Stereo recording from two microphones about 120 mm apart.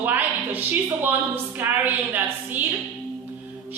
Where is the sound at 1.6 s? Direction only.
15° right (ahead or behind).